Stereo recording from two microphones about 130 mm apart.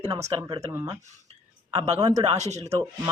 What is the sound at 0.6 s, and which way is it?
Speech, 25° right (ahead or behind).